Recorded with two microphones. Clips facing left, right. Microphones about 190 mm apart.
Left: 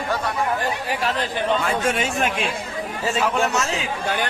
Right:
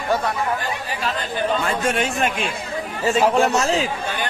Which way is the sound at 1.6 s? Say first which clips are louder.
Right 1 dB; centre (ahead or behind).